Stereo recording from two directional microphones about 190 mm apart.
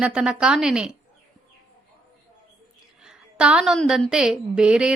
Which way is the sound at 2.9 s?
5° right (ahead or behind).